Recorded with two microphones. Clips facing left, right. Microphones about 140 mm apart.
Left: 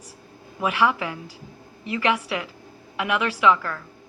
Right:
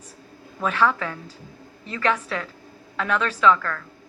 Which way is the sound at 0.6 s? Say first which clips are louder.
Even; 10° left (ahead or behind).